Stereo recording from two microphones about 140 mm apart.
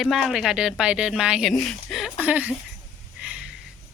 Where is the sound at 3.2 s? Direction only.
10° right (ahead or behind).